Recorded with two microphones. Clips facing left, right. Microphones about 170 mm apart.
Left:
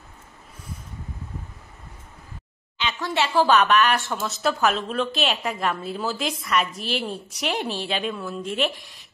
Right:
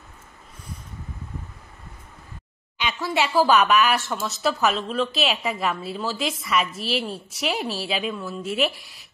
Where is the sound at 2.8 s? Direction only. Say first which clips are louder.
Right 1 dB; 10° right (ahead or behind).